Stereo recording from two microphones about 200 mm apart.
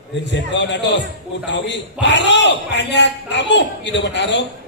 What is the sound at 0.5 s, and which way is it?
A man's voice, 60° left (ahead or behind).